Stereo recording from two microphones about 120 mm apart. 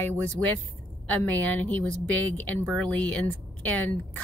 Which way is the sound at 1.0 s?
10° left (ahead or behind).